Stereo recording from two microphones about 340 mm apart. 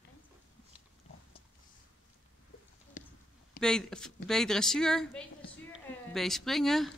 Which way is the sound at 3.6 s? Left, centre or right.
Centre.